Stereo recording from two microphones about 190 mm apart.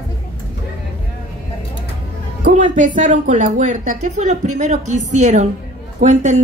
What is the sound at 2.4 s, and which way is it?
Speech, 45° right (ahead or behind).